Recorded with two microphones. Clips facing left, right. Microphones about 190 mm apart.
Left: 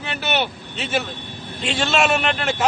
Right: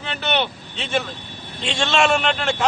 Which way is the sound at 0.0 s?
5° left (ahead or behind).